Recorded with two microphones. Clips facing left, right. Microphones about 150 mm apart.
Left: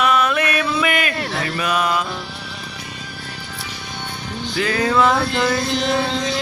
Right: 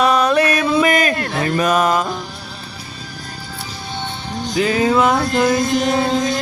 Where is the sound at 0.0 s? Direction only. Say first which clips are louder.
Right 4 dB; 35° right (ahead or behind).